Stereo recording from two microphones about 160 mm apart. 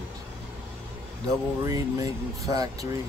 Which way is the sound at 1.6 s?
20° right (ahead or behind).